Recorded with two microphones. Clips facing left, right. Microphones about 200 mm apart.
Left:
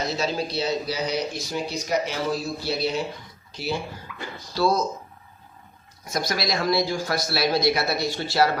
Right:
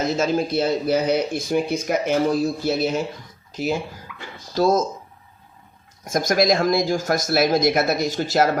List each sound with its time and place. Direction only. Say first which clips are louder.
0.0 s speech: right 5 dB; 50° right (ahead or behind)
4.1 s a sound: left 2 dB; 35° left (ahead or behind)
4.5 s speech: right 4 dB; 45° right (ahead or behind)
6.1 s speech: right 8 dB; 45° right (ahead or behind)